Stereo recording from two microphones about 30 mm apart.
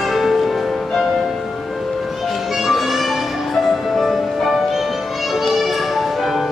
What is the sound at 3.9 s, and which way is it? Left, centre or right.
Music, centre.